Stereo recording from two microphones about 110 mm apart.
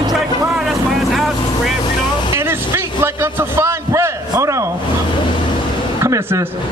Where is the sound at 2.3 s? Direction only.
25° right (ahead or behind).